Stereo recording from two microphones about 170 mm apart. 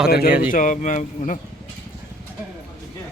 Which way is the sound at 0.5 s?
50° left (ahead or behind).